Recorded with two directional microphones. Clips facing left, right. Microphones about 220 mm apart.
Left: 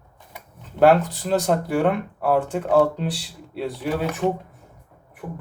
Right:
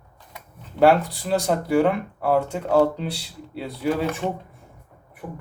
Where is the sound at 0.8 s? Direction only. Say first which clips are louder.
Left 1 dB; centre (ahead or behind).